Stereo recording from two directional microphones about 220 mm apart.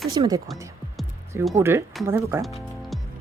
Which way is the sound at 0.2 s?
15° right (ahead or behind).